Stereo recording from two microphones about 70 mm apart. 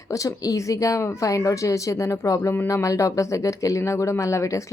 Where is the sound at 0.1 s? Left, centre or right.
Left.